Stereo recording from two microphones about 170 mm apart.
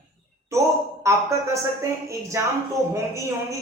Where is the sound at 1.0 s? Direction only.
15° right (ahead or behind).